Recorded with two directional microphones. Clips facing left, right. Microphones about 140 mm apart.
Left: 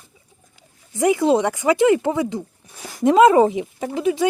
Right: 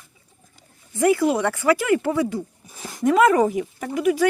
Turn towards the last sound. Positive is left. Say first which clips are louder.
# even
turn(degrees=25)  # may be behind; listen again after turning